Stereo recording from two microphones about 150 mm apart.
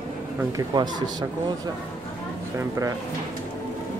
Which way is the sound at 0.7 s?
25° right (ahead or behind).